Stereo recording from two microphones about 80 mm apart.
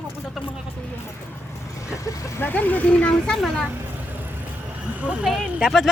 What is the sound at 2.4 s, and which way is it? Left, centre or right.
Speech, left.